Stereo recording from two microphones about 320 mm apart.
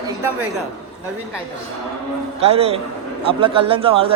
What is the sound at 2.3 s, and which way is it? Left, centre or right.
Speech, centre.